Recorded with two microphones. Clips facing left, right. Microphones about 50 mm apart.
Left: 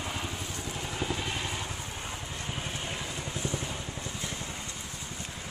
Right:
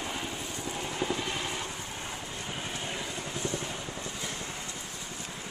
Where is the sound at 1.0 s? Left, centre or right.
Centre.